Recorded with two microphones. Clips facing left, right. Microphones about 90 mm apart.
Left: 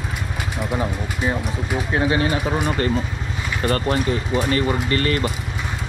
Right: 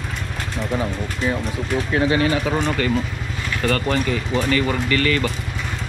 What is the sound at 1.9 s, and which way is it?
Bird, 25° left (ahead or behind).